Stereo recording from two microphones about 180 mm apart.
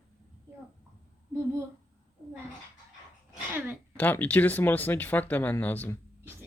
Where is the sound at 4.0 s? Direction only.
10° left (ahead or behind).